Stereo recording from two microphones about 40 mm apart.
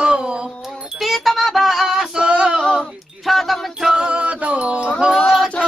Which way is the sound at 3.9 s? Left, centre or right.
Right.